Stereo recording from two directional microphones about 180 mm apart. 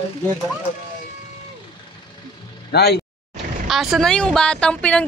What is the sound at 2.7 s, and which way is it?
Speech, 65° left (ahead or behind).